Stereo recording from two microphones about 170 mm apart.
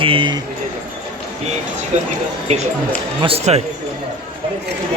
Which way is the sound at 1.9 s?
40° right (ahead or behind).